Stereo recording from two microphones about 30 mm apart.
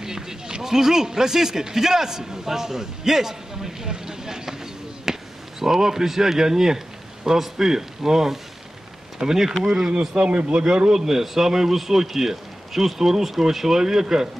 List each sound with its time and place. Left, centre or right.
0.0 s speech: centre
5.1 s basketball bounce: centre
5.6 s speech: centre
9.8 s speech: right
11.0 s speech: centre